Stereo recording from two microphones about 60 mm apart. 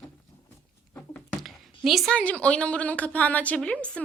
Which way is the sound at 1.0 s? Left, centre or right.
Left.